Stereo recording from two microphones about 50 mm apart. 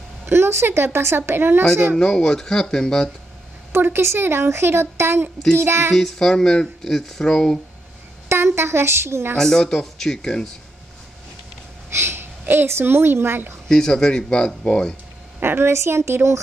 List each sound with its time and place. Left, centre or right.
0.3 s a woman's voice: right
2.0 s speech: centre
3.7 s a woman's voice: right
5.9 s speech: centre
8.3 s a woman's voice: right
9.4 s speech: centre
11.9 s a woman's voice: right
13.7 s speech: centre
15.4 s a woman's voice: right
15.7 s a woman's voice: right